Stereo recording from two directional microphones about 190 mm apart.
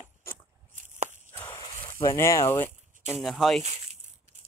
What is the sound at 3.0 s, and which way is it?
Speech, centre (ahead or behind).